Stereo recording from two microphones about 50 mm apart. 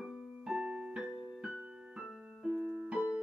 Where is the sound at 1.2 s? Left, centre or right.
Centre.